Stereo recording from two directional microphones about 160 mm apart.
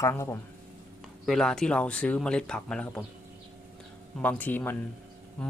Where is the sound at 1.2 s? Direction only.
5° left (ahead or behind).